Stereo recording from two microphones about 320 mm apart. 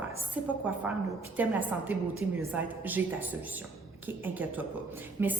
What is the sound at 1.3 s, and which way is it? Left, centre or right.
A woman's voice, centre.